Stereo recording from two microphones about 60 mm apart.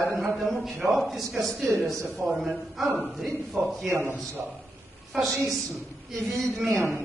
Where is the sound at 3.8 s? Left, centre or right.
Right.